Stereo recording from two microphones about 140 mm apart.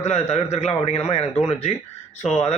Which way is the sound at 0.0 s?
50° left (ahead or behind).